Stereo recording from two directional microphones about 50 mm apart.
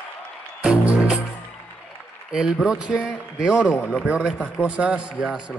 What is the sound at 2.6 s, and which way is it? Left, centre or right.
Speech, centre.